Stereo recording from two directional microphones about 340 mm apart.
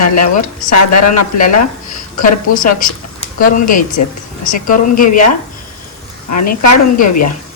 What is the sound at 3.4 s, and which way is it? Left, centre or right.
Speech, left.